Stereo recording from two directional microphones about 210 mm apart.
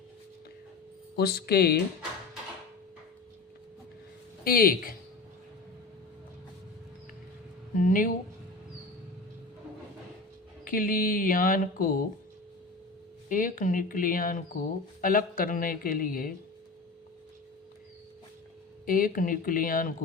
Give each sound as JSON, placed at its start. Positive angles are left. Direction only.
{"t": 1.1, "sound": "speech", "side_deg": 50}
{"t": 4.4, "sound": "speech", "side_deg": 45}
{"t": 7.8, "sound": "speech", "side_deg": 40}
{"t": 10.7, "sound": "speech", "side_deg": 40}
{"t": 13.2, "sound": "speech", "side_deg": 40}
{"t": 18.9, "sound": "speech", "side_deg": 45}